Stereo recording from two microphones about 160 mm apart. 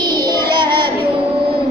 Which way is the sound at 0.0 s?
25° right (ahead or behind).